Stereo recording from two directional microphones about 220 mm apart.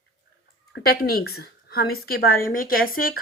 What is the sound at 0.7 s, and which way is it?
A woman's voice, 45° left (ahead or behind).